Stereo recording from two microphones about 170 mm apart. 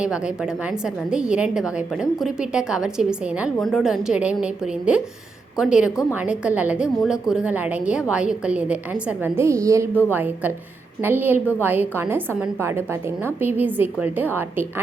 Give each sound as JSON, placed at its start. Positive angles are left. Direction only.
{"t": 0.0, "sound": "a woman's voice", "side_deg": -5}